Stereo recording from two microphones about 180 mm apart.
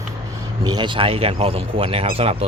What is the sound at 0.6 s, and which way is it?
Speech, 25° right (ahead or behind).